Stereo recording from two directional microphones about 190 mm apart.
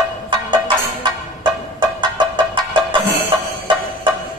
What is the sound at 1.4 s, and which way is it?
Music, 25° right (ahead or behind).